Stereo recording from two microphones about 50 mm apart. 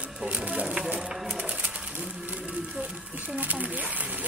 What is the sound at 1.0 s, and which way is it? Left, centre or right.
Speech, centre.